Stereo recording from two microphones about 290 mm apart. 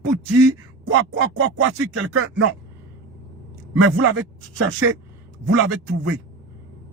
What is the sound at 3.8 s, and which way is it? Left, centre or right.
Speech, right.